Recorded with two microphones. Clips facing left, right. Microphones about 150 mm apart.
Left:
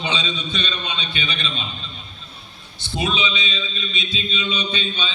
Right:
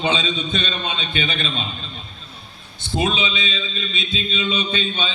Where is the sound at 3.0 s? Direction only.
50° right (ahead or behind).